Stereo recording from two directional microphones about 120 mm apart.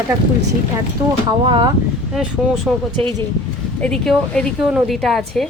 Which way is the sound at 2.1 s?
Centre (ahead or behind).